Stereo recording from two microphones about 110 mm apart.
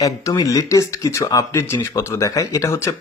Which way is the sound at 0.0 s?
35° left (ahead or behind).